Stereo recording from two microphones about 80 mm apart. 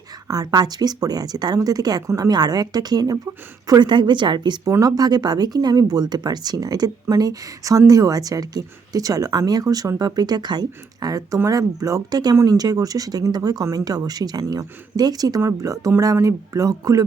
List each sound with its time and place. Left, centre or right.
0.3 s speech: right
3.7 s a woman's voice: right
4.8 s speech: right